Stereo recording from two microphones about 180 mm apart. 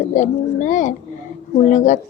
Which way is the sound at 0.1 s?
45° left (ahead or behind).